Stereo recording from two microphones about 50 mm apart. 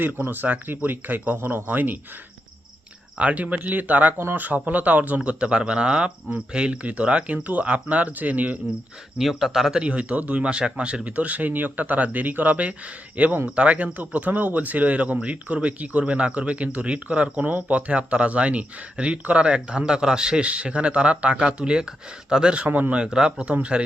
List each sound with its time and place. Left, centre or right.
0.3 s speech: right
3.2 s speech: right
4.2 s speech: right
4.4 s speech: right
9.1 s speech: centre
9.8 s speech: right
22.7 s speech: right
23.0 s speech: centre